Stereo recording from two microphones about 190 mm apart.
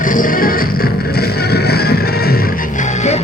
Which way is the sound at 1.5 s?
55° left (ahead or behind).